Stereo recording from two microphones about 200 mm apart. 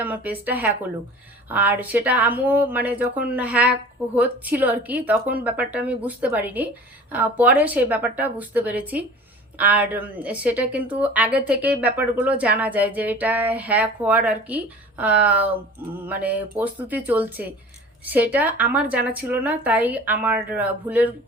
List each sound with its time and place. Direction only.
0.0 s a woman's voice: 10° right (ahead or behind)